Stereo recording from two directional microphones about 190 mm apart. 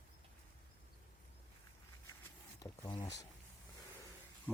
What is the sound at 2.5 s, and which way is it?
Speech, 20° left (ahead or behind).